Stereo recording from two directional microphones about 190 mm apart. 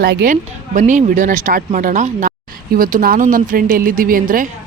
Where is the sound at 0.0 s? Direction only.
55° right (ahead or behind).